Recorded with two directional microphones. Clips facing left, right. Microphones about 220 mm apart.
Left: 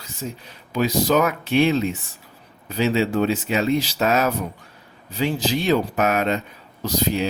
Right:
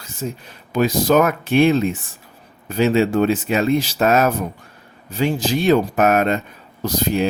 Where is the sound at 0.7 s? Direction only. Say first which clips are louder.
Right 3 dB; 50° right (ahead or behind).